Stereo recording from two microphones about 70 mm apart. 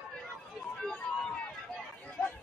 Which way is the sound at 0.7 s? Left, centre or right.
Centre.